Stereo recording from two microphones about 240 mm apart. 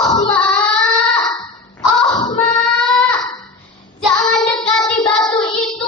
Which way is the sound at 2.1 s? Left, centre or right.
Centre.